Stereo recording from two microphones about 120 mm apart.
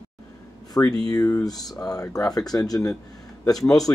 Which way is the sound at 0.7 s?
30° left (ahead or behind).